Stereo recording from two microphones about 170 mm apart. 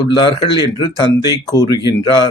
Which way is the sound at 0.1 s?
30° left (ahead or behind).